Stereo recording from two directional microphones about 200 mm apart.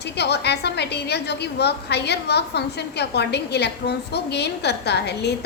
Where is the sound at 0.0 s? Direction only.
55° left (ahead or behind).